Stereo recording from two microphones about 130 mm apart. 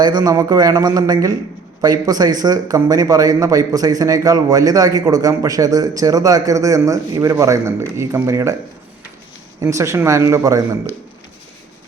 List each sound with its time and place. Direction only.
0.0 s speech: 35° right (ahead or behind)
9.6 s speech: 25° right (ahead or behind)